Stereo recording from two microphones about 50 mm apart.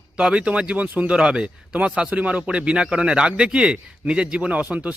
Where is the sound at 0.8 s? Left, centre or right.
Right.